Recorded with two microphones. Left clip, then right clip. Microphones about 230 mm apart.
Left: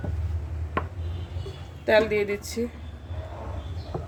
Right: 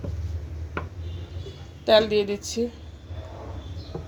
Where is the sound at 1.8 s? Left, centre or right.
Centre.